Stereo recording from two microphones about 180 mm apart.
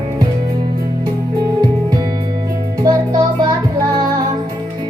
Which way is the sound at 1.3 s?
20° right (ahead or behind).